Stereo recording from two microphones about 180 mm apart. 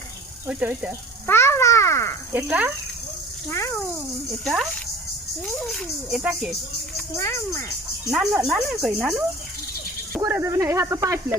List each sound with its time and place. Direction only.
0.4 s speech: 10° right (ahead or behind)
1.3 s a child's voice: 15° left (ahead or behind)
2.3 s speech: 10° right (ahead or behind)
3.5 s speech: 15° left (ahead or behind)
4.4 s speech: centre (ahead or behind)
7.2 s speech: 15° left (ahead or behind)
8.1 s speech: 5° right (ahead or behind)
10.2 s speech: 15° right (ahead or behind)